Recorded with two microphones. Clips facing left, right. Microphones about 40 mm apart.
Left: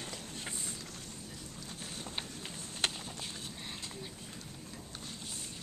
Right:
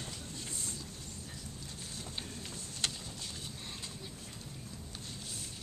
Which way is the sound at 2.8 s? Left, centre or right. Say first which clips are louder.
Left 3 dB; left.